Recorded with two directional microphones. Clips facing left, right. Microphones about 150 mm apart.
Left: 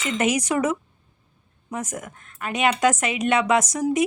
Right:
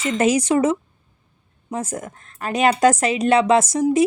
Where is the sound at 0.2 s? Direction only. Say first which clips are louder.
Right 5 dB; 30° right (ahead or behind).